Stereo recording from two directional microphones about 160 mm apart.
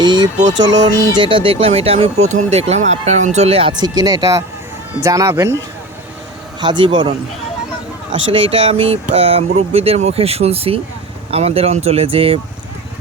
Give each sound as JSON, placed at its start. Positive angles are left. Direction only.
{"t": 0.0, "sound": "a sound", "side_deg": -25}
{"t": 0.4, "sound": "speech", "side_deg": -25}
{"t": 6.6, "sound": "speech", "side_deg": -30}
{"t": 8.3, "sound": "speech", "side_deg": -35}